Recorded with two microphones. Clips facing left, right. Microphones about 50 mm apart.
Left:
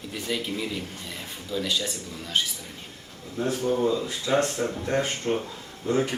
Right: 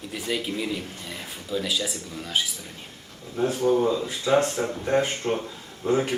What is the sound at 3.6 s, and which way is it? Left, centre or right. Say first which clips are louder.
Speech: right 5 dB; right.